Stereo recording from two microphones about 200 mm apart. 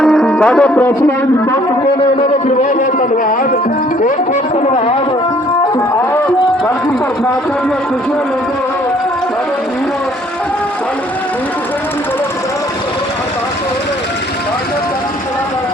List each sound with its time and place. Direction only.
0.0 s music: 5° left (ahead or behind)
4.6 s music: 30° left (ahead or behind)